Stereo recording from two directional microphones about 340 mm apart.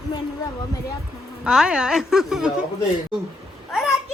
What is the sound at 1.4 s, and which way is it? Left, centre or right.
Speech, centre.